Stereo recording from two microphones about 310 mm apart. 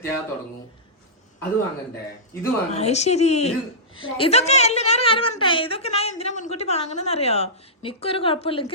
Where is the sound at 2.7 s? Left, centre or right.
Left.